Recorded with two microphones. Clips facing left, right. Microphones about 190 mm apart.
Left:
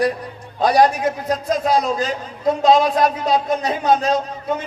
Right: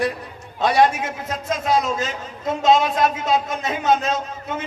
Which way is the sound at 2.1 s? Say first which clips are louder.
Left 6 dB; 40° left (ahead or behind).